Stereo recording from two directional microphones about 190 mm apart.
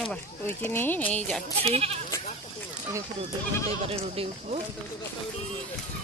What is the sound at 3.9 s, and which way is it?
Speech, 30° right (ahead or behind).